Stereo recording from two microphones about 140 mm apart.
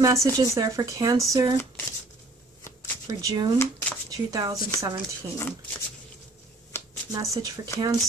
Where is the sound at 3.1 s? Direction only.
25° right (ahead or behind).